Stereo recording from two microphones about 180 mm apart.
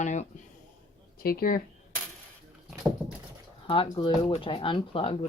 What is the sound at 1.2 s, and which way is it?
Speech, 55° left (ahead or behind).